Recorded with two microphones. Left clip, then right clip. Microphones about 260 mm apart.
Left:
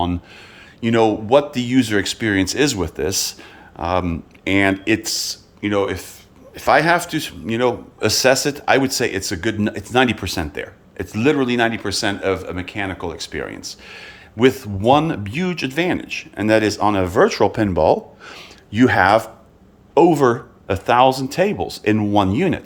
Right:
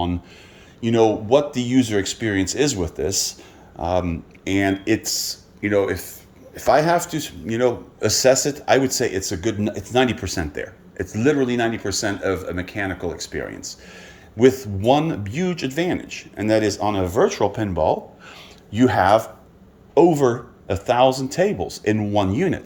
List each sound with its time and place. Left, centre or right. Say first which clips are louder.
0.8 s speech: left 1 dB; centre